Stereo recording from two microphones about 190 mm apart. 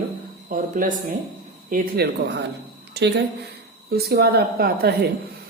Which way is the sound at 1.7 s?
55° right (ahead or behind).